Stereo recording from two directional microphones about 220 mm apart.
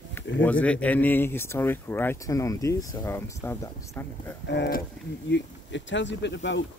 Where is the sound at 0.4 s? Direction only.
5° left (ahead or behind).